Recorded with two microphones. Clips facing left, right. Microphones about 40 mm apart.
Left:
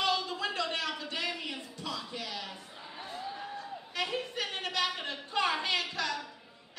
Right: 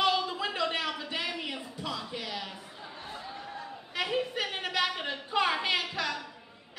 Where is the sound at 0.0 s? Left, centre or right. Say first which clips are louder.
Right 3 dB; centre.